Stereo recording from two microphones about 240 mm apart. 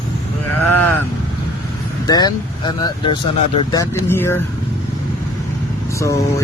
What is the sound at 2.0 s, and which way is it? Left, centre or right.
Speech, centre.